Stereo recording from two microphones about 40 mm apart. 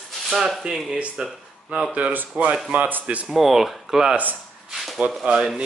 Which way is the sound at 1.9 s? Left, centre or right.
Right.